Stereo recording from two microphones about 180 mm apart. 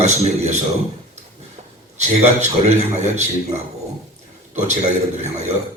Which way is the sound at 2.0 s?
40° right (ahead or behind).